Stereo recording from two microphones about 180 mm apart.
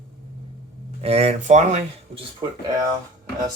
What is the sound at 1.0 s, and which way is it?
Speech, 35° right (ahead or behind).